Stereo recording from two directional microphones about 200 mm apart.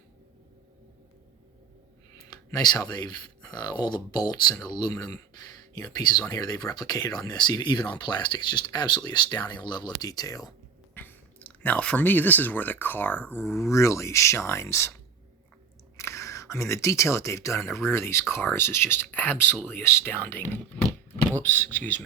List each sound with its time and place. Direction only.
2.6 s speech: 20° left (ahead or behind)
16.0 s speech: 15° left (ahead or behind)